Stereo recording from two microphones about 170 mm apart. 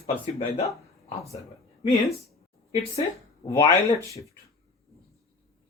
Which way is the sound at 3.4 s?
20° left (ahead or behind).